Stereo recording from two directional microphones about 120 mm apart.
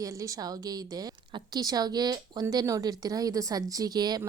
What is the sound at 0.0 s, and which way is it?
Speech, 30° right (ahead or behind).